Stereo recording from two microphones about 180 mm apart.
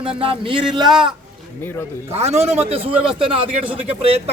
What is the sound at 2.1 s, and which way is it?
Speech, 35° right (ahead or behind).